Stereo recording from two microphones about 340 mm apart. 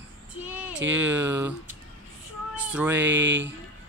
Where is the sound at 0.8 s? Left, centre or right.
Right.